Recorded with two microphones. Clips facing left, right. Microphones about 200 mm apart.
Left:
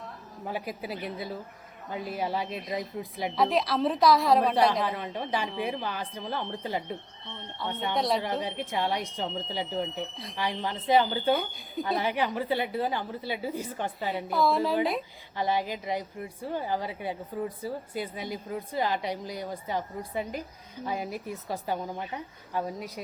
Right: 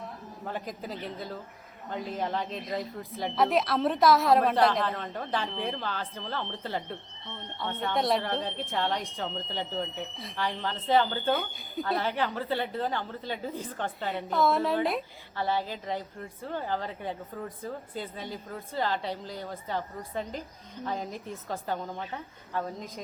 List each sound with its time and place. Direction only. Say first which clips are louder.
0.4 s a woman's voice: left 2 dB; 10° left (ahead or behind)
3.0 s a woman's voice: left 1 dB; 15° left (ahead or behind)
3.3 s a woman's voice: even; centre (ahead or behind)
4.8 s a woman's voice: left 1 dB; 10° left (ahead or behind)
7.9 s a woman's voice: right 1 dB; centre (ahead or behind)
8.2 s a woman's voice: left 1 dB; 10° left (ahead or behind)
11.3 s a woman's voice: left 1 dB; centre (ahead or behind)
11.9 s a woman's voice: left 3 dB; 15° left (ahead or behind)
15.4 s a woman's voice: left 2 dB; 15° left (ahead or behind)